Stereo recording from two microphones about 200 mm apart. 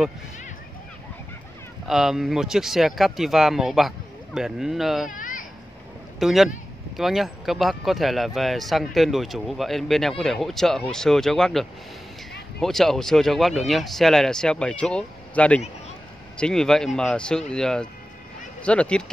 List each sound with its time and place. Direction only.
1.9 s speech: centre (ahead or behind)
5.1 s a sound: 40° left (ahead or behind)
6.1 s a man's voice: centre (ahead or behind)